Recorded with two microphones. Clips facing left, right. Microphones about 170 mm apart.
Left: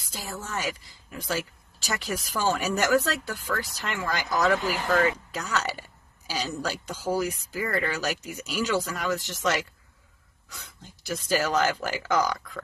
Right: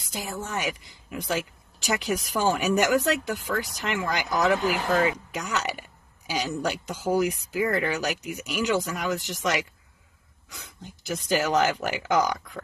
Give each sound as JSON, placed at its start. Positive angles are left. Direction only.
{"t": 0.0, "sound": "a woman's voice", "side_deg": -20}
{"t": 11.1, "sound": "speech", "side_deg": -15}